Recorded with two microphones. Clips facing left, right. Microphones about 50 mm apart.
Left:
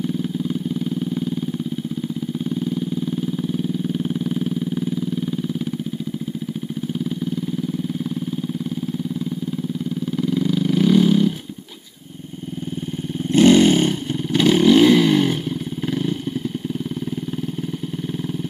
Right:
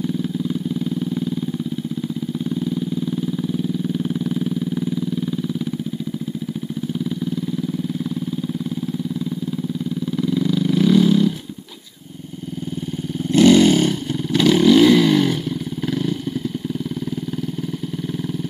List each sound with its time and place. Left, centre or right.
2.5 s vehicle: centre
10.1 s vehicle: centre
13.3 s vehicle: left